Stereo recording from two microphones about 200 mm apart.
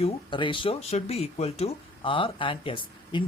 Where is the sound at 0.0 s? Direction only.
25° left (ahead or behind).